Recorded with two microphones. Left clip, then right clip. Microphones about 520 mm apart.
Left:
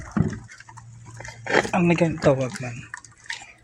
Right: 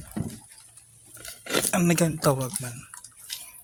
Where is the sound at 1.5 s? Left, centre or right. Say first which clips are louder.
Left 4 dB; right.